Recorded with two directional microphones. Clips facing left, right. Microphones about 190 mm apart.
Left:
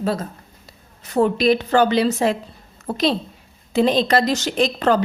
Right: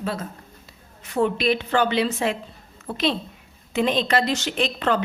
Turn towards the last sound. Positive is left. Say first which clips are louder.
# left 5 dB
turn(degrees=40)  # may be behind; listen again after turning